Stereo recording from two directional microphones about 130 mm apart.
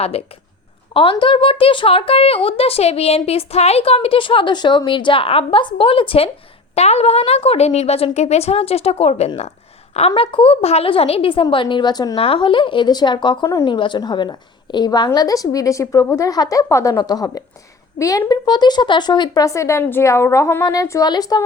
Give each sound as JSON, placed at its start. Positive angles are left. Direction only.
{"t": 0.0, "sound": "speech", "side_deg": 50}
{"t": 1.1, "sound": "a woman's voice", "side_deg": 40}
{"t": 12.2, "sound": "a woman's voice", "side_deg": 40}